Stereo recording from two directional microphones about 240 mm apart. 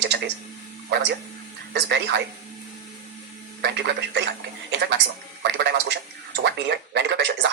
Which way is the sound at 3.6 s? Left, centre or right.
Right.